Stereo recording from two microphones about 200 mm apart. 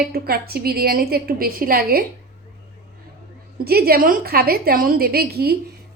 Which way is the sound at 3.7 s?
50° right (ahead or behind).